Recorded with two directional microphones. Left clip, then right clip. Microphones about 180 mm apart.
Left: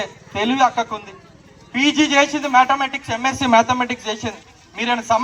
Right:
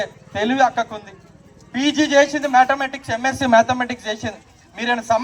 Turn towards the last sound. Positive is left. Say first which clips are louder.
# left 1 dB
turn(degrees=-20)  # may be behind; listen again after turning